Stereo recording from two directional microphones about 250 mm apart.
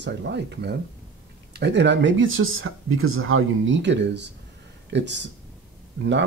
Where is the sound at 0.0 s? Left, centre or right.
Right.